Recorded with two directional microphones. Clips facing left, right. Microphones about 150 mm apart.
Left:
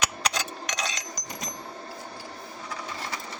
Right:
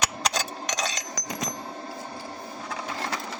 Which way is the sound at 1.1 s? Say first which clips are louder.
Right 5 dB; 90° right.